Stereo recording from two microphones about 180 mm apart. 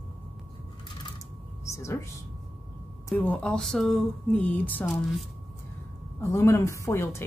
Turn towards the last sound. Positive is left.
turn(degrees=15)  # may be behind; listen again after turning